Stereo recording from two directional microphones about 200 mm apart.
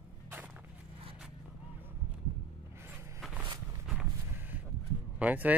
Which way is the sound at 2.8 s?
10° right (ahead or behind).